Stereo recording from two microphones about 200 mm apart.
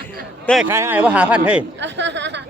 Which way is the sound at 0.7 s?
10° right (ahead or behind).